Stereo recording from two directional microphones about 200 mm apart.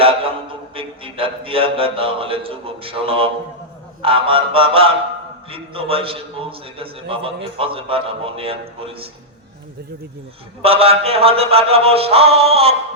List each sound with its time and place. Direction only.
0.0 s a man's voice: 30° right (ahead or behind)
10.6 s a man's voice: 30° right (ahead or behind)